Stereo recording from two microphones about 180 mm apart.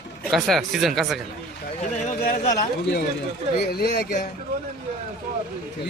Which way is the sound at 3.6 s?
65° left (ahead or behind).